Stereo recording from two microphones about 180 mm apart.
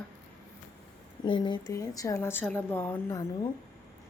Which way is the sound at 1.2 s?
25° left (ahead or behind).